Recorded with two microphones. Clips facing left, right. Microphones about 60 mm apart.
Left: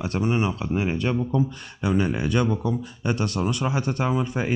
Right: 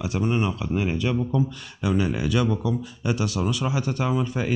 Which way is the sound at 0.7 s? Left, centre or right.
Left.